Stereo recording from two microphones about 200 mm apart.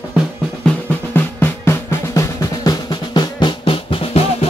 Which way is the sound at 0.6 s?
10° left (ahead or behind).